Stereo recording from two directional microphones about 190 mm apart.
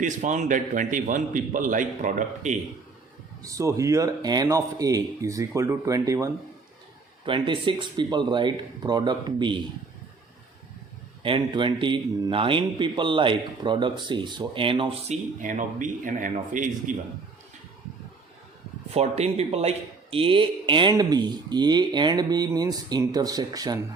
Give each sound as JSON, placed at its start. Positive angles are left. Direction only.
{"t": 0.0, "sound": "a man's voice", "side_deg": -40}
{"t": 3.4, "sound": "a man's voice", "side_deg": -15}
{"t": 11.2, "sound": "a man's voice", "side_deg": -25}
{"t": 18.9, "sound": "a man's voice", "side_deg": -35}